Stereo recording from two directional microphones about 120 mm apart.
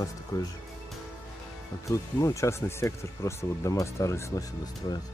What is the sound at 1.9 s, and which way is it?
Speech, 25° left (ahead or behind).